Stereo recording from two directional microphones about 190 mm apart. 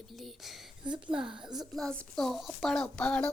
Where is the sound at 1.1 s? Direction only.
25° right (ahead or behind).